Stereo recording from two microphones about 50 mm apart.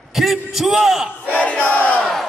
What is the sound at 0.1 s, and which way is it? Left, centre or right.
Speech, centre.